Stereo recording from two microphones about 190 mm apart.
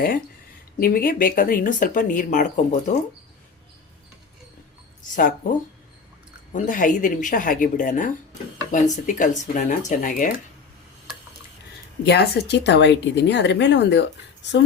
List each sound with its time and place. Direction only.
0.8 s speech: 50° left (ahead or behind)
5.1 s speech: 45° left (ahead or behind)
6.5 s speech: 45° left (ahead or behind)
12.0 s speech: 60° left (ahead or behind)